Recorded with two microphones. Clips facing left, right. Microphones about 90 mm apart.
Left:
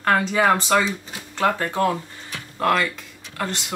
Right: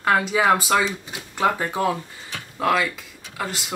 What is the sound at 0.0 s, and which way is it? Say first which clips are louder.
Speech: even; 5° right (ahead or behind).